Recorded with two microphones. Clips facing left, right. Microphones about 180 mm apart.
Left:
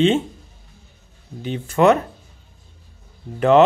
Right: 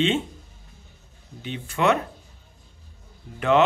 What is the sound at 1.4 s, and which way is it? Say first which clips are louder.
Speech: left 7 dB; 40° left (ahead or behind).